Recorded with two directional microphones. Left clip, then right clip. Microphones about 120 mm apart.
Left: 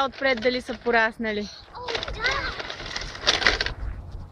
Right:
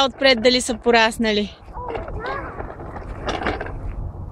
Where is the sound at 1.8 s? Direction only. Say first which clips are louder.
Left 2 dB; 25° left (ahead or behind).